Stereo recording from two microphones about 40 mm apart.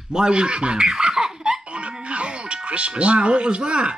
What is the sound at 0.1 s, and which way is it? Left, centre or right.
A man's voice, centre.